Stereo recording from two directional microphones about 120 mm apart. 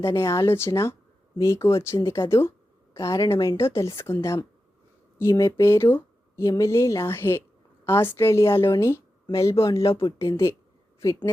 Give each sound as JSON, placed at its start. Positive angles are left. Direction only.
{"t": 0.0, "sound": "speech", "side_deg": 25}
{"t": 9.7, "sound": "speech", "side_deg": 50}
{"t": 10.2, "sound": "a woman's voice", "side_deg": 25}